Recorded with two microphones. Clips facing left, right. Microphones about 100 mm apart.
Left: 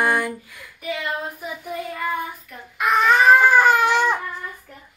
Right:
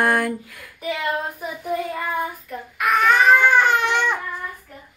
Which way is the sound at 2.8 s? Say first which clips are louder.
Even; 30° left (ahead or behind).